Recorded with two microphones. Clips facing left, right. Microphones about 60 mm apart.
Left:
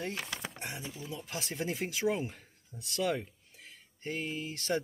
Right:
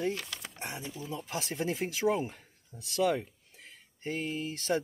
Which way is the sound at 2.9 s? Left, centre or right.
Centre.